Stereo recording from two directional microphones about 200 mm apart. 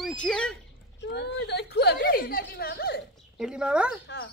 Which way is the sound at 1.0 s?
55° left (ahead or behind).